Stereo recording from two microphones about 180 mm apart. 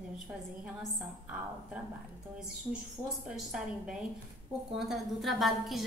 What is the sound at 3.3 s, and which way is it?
A woman's voice, 5° right (ahead or behind).